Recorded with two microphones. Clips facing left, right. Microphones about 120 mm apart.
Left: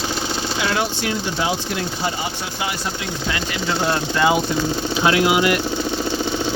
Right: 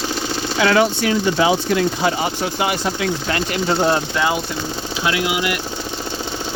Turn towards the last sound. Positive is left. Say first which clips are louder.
# left 4 dB
turn(degrees=35)  # may be behind; listen again after turning